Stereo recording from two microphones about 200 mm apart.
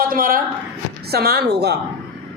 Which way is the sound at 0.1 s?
45° right (ahead or behind).